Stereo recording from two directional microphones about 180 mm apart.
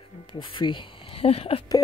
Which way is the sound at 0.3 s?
30° left (ahead or behind).